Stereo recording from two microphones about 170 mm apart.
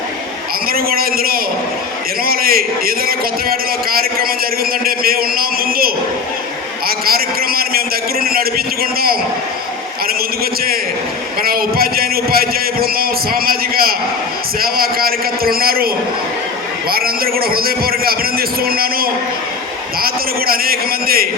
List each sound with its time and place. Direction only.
0.7 s a man's voice: 60° right (ahead or behind)
16.9 s a man's voice: 60° right (ahead or behind)